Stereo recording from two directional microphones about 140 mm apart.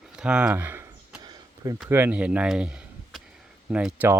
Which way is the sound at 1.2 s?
25° right (ahead or behind).